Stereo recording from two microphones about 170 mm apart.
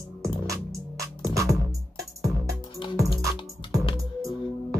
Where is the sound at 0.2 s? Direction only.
20° right (ahead or behind).